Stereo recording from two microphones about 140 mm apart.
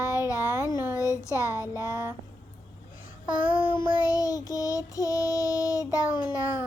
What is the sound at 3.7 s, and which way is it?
Child singing, 25° left (ahead or behind).